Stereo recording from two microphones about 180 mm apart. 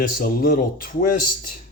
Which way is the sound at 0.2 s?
55° left (ahead or behind).